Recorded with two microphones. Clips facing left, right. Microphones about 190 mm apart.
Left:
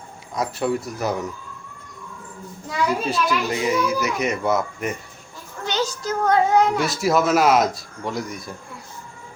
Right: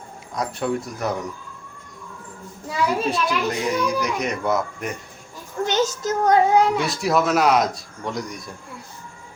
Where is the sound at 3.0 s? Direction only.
Centre (ahead or behind).